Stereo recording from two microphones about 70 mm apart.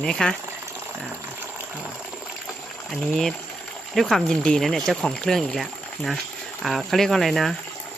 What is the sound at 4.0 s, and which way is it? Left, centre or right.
Speech, centre.